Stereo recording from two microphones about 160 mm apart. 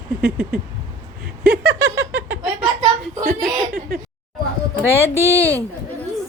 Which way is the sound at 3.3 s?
75° right (ahead or behind).